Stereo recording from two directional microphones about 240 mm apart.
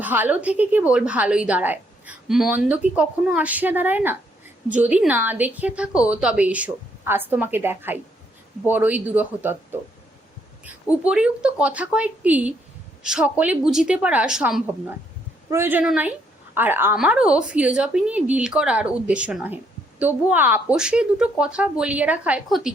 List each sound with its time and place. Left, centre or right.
0.0 s a woman's voice: centre
11.0 s a woman's voice: centre